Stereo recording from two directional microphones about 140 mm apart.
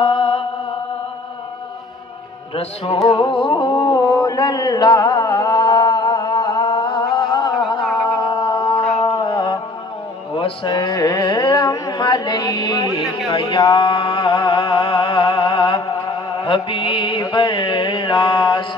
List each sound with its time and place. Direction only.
0.0 s mantra: 40° left (ahead or behind)
2.5 s music: 40° left (ahead or behind)
3.1 s a sound: 35° left (ahead or behind)
13.3 s music: 35° left (ahead or behind)
16.0 s mantra: 35° left (ahead or behind)